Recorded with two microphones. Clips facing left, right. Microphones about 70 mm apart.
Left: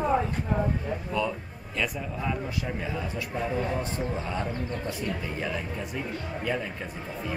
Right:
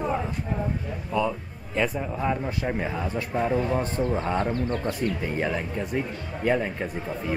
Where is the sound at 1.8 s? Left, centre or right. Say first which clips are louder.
Right 5 dB; right.